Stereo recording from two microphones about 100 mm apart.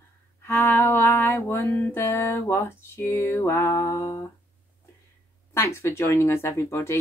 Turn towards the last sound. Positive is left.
turn(degrees=25)  # may be behind; listen again after turning